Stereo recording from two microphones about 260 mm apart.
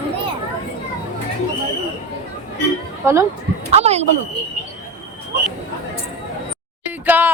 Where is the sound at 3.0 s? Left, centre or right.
Centre.